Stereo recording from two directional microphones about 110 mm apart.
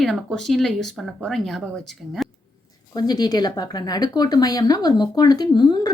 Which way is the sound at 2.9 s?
35° left (ahead or behind).